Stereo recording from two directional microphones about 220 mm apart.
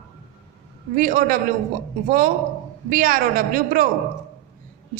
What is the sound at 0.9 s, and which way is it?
Speech, 40° right (ahead or behind).